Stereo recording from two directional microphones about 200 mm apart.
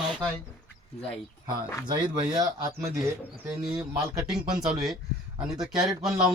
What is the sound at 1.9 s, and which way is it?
Speech, 20° right (ahead or behind).